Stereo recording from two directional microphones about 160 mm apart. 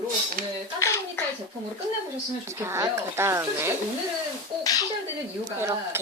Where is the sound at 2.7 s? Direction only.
15° right (ahead or behind).